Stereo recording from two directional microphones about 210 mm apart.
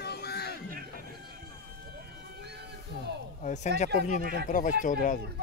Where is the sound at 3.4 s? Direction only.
35° left (ahead or behind).